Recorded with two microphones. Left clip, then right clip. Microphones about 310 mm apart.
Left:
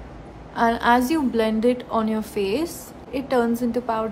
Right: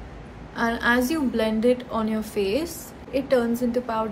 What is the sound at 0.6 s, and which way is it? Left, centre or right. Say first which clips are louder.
A woman's voice: left 4 dB; centre.